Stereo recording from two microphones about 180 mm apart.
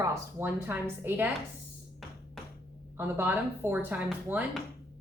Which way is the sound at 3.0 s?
10° right (ahead or behind).